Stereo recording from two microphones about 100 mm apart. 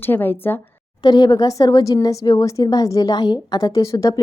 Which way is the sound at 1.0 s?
45° left (ahead or behind).